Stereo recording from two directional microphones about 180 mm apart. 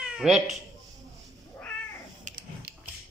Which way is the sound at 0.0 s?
5° right (ahead or behind).